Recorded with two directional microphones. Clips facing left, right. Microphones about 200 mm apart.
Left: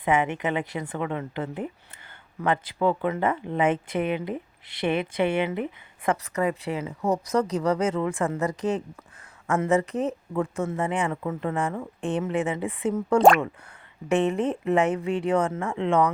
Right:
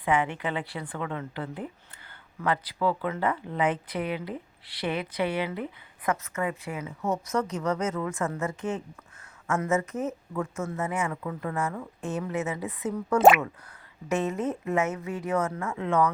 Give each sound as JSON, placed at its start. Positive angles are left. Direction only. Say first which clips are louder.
{"t": 0.0, "sound": "speech", "louder": "left 3 dB", "side_deg": 20}
{"t": 6.1, "sound": "speech", "louder": "left 4 dB", "side_deg": 35}
{"t": 13.1, "sound": "speech", "louder": "left 1 dB", "side_deg": -5}
{"t": 14.1, "sound": "speech", "louder": "left 5 dB", "side_deg": 30}
{"t": 15.8, "sound": "speech", "louder": "left 3 dB", "side_deg": 20}